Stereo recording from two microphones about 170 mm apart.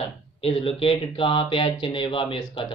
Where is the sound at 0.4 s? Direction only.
35° left (ahead or behind).